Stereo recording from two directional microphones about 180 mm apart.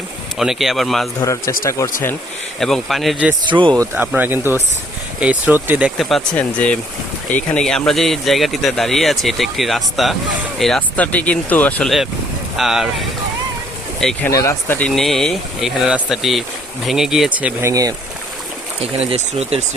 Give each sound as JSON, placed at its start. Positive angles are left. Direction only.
{"t": 0.3, "sound": "speech", "side_deg": 0}
{"t": 1.2, "sound": "speech", "side_deg": 15}
{"t": 2.6, "sound": "speech", "side_deg": 0}
{"t": 14.3, "sound": "speech", "side_deg": 15}
{"t": 19.1, "sound": "speech", "side_deg": -35}